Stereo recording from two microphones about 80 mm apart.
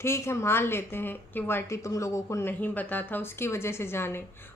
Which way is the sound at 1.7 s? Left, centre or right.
Left.